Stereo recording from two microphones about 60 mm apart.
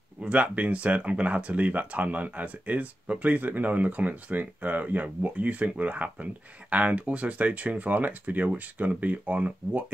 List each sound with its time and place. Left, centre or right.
0.2 s speech: right